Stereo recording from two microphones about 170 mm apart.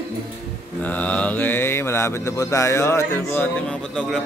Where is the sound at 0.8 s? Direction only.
10° left (ahead or behind).